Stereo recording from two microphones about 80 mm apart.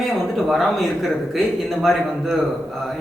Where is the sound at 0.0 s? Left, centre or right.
Centre.